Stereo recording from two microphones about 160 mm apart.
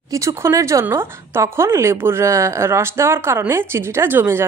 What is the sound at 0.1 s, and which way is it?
A woman's voice, 20° right (ahead or behind).